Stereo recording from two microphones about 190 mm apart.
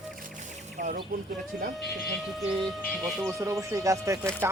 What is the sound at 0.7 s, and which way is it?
Speech, 45° right (ahead or behind).